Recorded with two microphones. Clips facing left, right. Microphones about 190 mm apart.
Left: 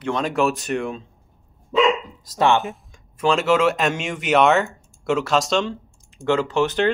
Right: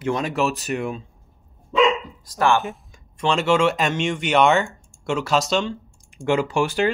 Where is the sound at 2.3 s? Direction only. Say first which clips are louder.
Left 1 dB; 20° left (ahead or behind).